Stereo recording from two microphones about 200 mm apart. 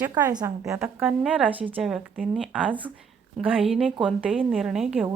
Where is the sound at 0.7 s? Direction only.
5° right (ahead or behind).